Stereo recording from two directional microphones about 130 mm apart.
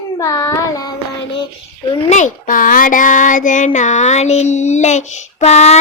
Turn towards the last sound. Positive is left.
turn(degrees=60)  # may be behind; listen again after turning